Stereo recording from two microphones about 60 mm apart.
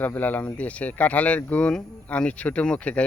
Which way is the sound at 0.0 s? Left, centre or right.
Left.